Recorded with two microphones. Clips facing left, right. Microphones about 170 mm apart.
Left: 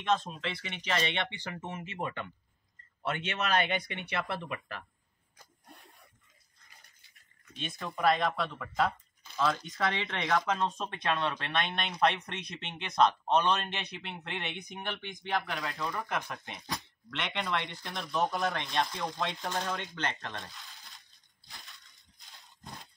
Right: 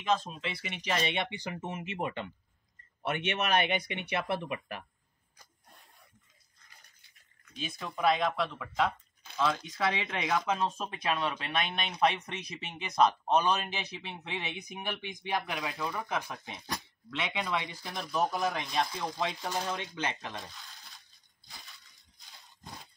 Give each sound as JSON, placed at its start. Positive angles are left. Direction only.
{"t": 0.0, "sound": "speech", "side_deg": 0}
{"t": 1.2, "sound": "speech", "side_deg": -15}
{"t": 7.4, "sound": "speech", "side_deg": 0}
{"t": 15.5, "sound": "speech", "side_deg": 0}
{"t": 21.5, "sound": "a sound", "side_deg": 0}